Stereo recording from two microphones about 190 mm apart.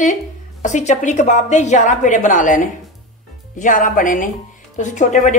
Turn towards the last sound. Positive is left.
turn(degrees=40)  # may be behind; listen again after turning